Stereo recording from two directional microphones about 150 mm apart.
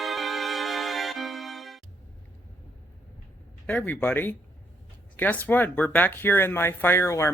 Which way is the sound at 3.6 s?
10° left (ahead or behind).